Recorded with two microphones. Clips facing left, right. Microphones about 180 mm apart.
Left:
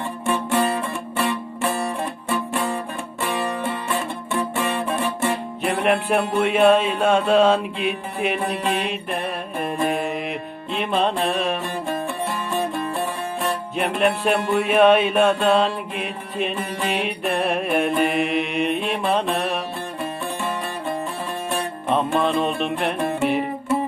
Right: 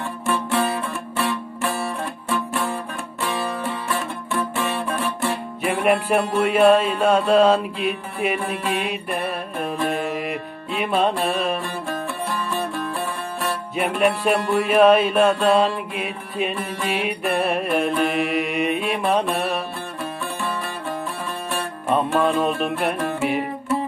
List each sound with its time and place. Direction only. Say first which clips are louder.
0.3 s music: left 1 dB; 15° left (ahead or behind)
4.4 s music: left 1 dB; 15° left (ahead or behind)
5.6 s music: right 1 dB; 5° right (ahead or behind)
11.6 s music: left 2 dB; 15° left (ahead or behind)
13.7 s music: right 1 dB; centre (ahead or behind)
21.9 s music: right 1 dB; 5° right (ahead or behind)